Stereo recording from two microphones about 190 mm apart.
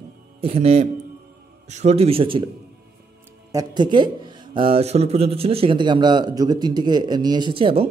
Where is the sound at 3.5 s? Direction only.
25° right (ahead or behind).